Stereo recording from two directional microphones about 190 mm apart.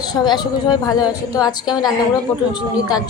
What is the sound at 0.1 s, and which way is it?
A woman's voice, 20° left (ahead or behind).